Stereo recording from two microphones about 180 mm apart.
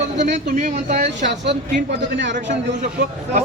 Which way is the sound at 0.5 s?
45° right (ahead or behind).